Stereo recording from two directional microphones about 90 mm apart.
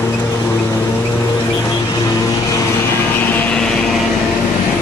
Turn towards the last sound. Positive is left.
turn(degrees=20)  # may be behind; listen again after turning